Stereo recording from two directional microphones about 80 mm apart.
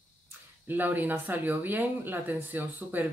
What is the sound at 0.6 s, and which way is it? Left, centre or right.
Speech, right.